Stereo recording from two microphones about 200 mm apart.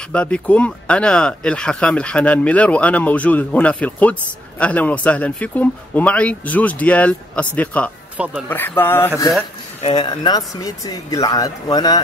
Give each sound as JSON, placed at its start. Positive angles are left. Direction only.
{"t": 0.1, "sound": "speech", "side_deg": 5}
{"t": 8.2, "sound": "speech", "side_deg": -5}
{"t": 8.5, "sound": "speech", "side_deg": 10}
{"t": 9.8, "sound": "speech", "side_deg": 25}